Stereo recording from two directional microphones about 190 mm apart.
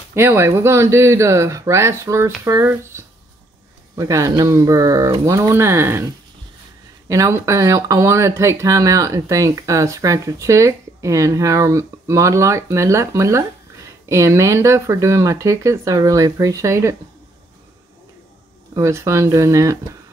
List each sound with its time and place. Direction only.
0.1 s speech: 10° right (ahead or behind)
7.1 s speech: 15° right (ahead or behind)
18.8 s speech: 15° right (ahead or behind)